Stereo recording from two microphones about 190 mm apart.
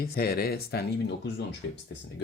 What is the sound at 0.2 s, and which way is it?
Speech, 55° left (ahead or behind).